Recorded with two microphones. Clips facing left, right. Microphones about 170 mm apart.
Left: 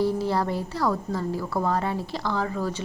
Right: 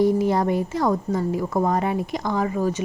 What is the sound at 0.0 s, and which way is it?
A woman's voice, 15° right (ahead or behind).